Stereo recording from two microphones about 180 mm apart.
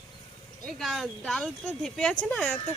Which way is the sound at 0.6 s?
Centre (ahead or behind).